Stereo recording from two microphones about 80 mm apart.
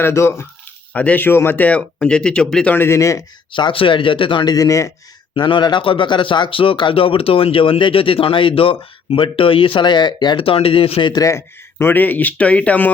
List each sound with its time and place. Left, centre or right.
0.0 s speech: left
0.9 s speech: left
2.7 s speech: left
3.5 s speech: left
4.5 s speech: left
5.3 s speech: left
11.2 s speech: left; by 12.9 s centre